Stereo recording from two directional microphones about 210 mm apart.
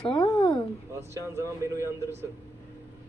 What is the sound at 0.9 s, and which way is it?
Speech, 15° right (ahead or behind).